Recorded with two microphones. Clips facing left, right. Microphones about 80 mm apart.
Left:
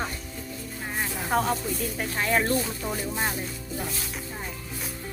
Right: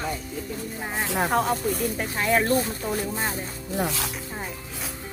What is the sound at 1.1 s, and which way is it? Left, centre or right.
Speech, right.